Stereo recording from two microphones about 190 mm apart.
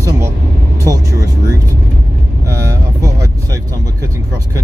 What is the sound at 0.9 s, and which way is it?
Speech, 15° right (ahead or behind).